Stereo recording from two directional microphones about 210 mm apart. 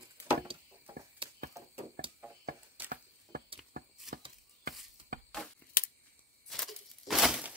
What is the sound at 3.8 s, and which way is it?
Chopping, 45° right (ahead or behind).